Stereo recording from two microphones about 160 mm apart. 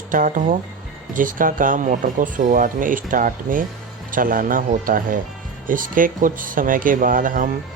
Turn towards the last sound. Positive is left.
turn(degrees=-55)  # may be behind; listen again after turning